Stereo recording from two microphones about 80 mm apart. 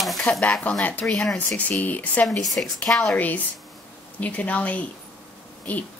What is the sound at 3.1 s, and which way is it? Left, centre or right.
Speech, left.